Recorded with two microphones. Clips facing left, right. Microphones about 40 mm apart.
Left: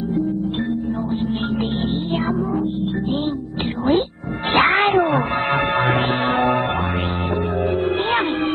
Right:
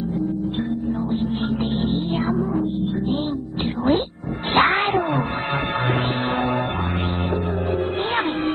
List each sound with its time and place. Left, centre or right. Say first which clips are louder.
4.6 s music: left 2 dB; centre
4.8 s music: left 4 dB; left